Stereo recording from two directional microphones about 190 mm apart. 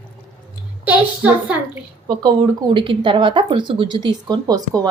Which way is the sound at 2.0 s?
20° right (ahead or behind).